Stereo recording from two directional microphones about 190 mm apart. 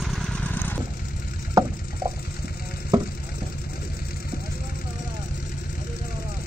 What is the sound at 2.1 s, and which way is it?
Water, 55° left (ahead or behind).